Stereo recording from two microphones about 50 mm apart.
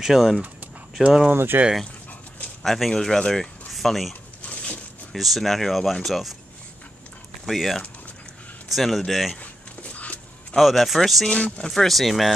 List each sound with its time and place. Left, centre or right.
0.0 s speech: centre
1.3 s speech: right
2.6 s speech: centre
4.4 s a sound: left
5.1 s speech: centre
7.4 s speech: centre
9.4 s a sound: left
10.5 s speech: centre
11.2 s speech: left
11.6 s speech: centre